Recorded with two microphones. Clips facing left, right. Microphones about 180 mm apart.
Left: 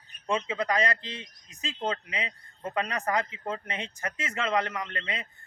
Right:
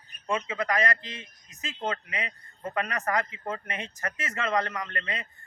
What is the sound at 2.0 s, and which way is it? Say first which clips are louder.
Speech: even; 20° left (ahead or behind).